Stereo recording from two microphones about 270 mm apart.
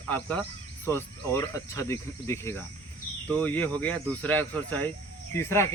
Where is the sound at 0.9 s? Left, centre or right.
Centre.